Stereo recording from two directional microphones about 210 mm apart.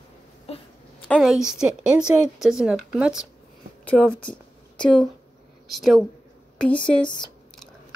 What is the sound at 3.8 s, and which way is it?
A woman's voice, 5° left (ahead or behind).